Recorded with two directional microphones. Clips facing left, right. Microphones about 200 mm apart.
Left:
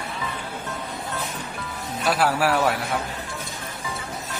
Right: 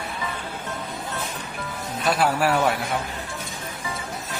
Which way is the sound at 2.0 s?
5° left (ahead or behind).